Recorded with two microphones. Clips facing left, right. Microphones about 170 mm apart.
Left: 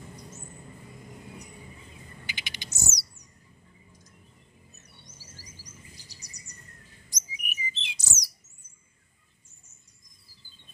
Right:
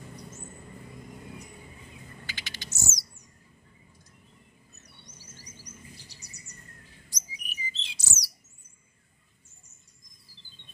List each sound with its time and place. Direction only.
2.2 s a sound: 15° left (ahead or behind)
5.1 s music: 10° left (ahead or behind)
5.9 s bird: 40° left (ahead or behind)
7.1 s chirp: 15° left (ahead or behind)